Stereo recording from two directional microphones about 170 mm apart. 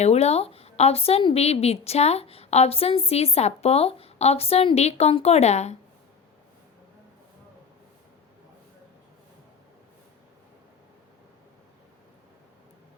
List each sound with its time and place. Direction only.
0.0 s a woman's voice: 40° left (ahead or behind)